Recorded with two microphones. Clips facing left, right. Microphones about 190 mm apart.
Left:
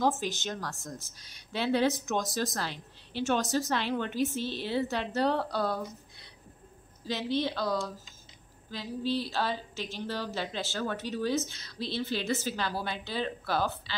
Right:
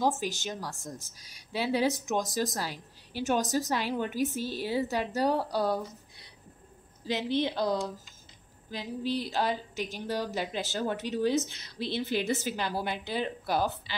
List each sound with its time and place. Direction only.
0.0 s speech: 10° right (ahead or behind)
7.1 s speech: 15° right (ahead or behind)